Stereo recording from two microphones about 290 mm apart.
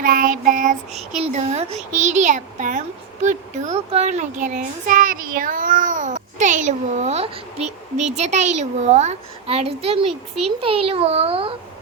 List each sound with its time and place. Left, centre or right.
0.0 s a child's voice: right